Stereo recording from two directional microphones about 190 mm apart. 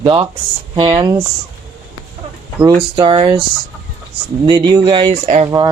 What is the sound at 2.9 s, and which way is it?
Speech, 25° right (ahead or behind).